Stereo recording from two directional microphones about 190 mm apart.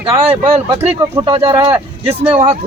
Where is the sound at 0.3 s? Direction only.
10° right (ahead or behind).